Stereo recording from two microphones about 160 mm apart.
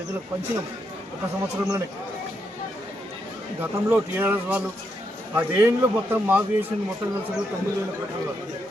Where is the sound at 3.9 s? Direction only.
10° right (ahead or behind).